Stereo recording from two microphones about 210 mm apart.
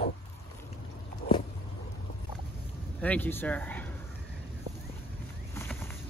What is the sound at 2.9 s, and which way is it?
Speech, 5° left (ahead or behind).